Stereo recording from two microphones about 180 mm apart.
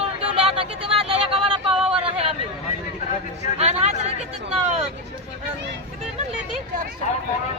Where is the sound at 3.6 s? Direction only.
40° right (ahead or behind).